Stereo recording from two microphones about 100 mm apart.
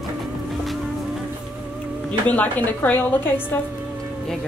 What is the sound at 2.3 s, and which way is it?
Speech, 15° left (ahead or behind).